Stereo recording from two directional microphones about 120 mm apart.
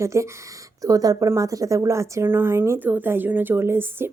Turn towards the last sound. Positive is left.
turn(degrees=-20)  # may be behind; listen again after turning